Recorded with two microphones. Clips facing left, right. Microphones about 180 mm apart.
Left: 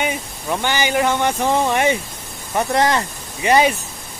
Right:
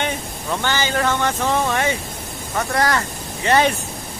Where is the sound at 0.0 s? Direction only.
15° left (ahead or behind).